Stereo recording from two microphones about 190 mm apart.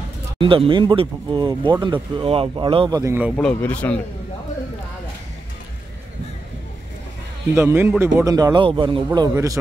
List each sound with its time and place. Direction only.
0.4 s speech: 25° right (ahead or behind)
3.0 s a man's voice: 10° right (ahead or behind)
3.3 s speech: 5° left (ahead or behind)
7.5 s a man's voice: 15° right (ahead or behind)